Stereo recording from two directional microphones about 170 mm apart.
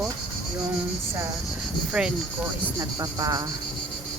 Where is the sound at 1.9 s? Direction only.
5° right (ahead or behind).